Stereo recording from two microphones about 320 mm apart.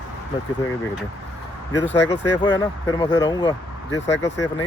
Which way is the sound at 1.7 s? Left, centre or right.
Left.